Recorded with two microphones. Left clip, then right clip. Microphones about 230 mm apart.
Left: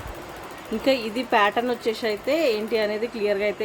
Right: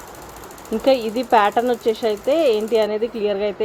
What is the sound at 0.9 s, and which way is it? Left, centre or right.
Speech, centre.